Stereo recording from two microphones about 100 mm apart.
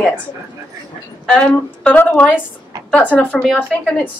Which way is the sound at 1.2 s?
10° left (ahead or behind).